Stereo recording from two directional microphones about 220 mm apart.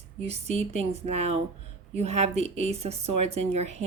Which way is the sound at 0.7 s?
30° right (ahead or behind).